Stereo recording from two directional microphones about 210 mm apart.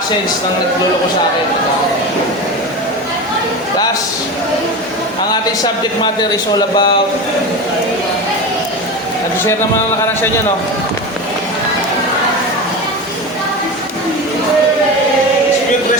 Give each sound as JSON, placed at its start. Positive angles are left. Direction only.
{"t": 5.3, "sound": "speech", "side_deg": 20}